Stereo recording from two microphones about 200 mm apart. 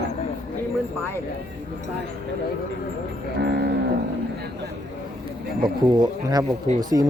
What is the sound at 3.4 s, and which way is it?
Moo, 55° right (ahead or behind).